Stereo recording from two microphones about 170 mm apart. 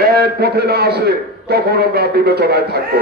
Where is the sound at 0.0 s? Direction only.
65° right (ahead or behind).